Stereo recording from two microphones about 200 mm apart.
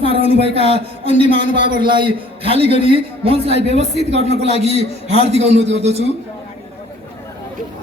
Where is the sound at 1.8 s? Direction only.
25° right (ahead or behind).